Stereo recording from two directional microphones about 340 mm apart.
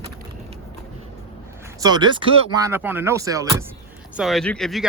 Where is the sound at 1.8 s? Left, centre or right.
Centre.